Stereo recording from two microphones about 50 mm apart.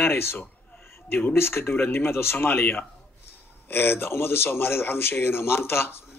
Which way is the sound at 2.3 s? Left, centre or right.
Left.